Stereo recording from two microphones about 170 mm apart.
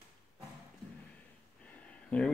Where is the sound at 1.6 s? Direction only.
10° left (ahead or behind).